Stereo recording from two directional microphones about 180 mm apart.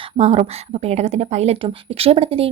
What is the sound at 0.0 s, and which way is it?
Speech, 35° right (ahead or behind).